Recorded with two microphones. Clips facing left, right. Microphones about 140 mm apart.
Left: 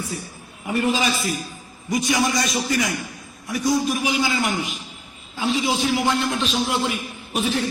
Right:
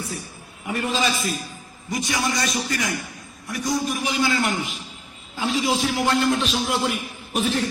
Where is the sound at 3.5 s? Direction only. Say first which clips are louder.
Left 4 dB; 5° left (ahead or behind).